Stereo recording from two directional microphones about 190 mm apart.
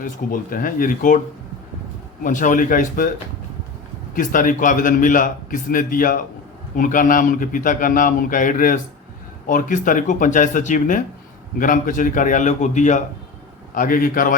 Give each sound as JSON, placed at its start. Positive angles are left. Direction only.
{"t": 0.0, "sound": "a man's voice", "side_deg": 45}
{"t": 2.2, "sound": "a man's voice", "side_deg": 45}
{"t": 4.1, "sound": "a man's voice", "side_deg": 45}